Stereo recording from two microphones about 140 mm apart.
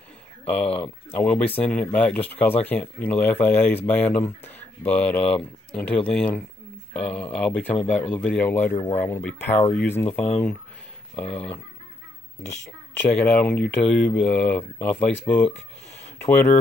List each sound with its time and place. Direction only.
0.5 s speech: 10° left (ahead or behind)
13.0 s speech: 10° left (ahead or behind)